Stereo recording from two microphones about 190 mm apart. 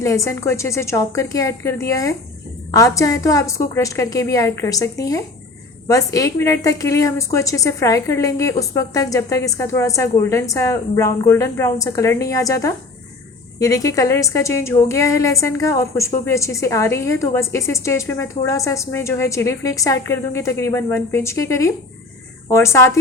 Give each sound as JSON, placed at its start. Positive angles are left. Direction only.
{"t": 0.0, "sound": "a woman's voice", "side_deg": 15}